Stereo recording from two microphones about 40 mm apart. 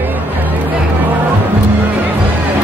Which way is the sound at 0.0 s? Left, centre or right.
Right.